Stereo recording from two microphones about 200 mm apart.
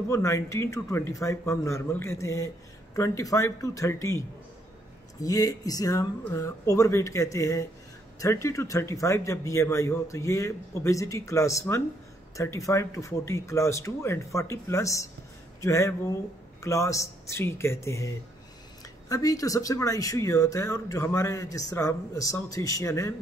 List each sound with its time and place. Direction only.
0.1 s speech: 15° left (ahead or behind)
5.2 s speech: 15° left (ahead or behind)